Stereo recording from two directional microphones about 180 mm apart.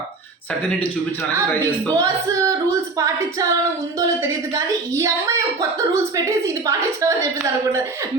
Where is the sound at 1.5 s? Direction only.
10° left (ahead or behind).